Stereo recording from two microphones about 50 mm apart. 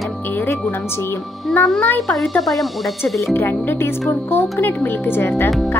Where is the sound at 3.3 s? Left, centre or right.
Left.